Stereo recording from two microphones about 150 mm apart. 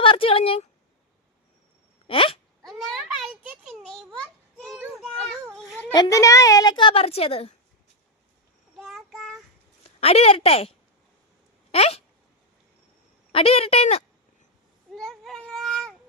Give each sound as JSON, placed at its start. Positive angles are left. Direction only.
{"t": 0.0, "sound": "speech", "side_deg": 35}
{"t": 2.0, "sound": "a sound", "side_deg": 35}
{"t": 2.6, "sound": "a sound", "side_deg": 0}
{"t": 5.9, "sound": "a woman's voice", "side_deg": 25}
{"t": 8.8, "sound": "child singing", "side_deg": 0}
{"t": 10.0, "sound": "a woman's voice", "side_deg": 40}
{"t": 13.3, "sound": "a woman's voice", "side_deg": 40}
{"t": 14.9, "sound": "a sound", "side_deg": 0}
{"t": 15.4, "sound": "baby cry", "side_deg": 5}